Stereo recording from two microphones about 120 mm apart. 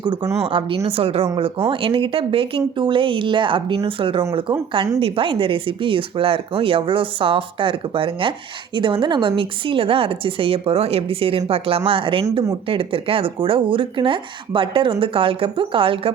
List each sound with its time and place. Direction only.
0.0 s speech: 40° right (ahead or behind)